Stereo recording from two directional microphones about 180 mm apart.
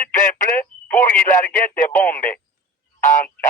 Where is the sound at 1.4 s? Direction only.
50° left (ahead or behind).